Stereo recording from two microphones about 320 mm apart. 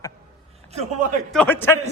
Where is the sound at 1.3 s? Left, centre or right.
Centre.